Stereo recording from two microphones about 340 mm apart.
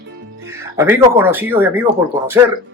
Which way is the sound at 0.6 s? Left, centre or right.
Centre.